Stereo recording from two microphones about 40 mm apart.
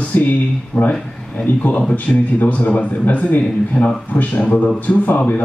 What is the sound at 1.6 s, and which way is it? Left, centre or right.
A man's voice, left.